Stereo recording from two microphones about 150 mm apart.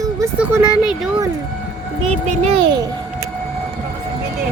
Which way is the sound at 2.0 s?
45° right (ahead or behind).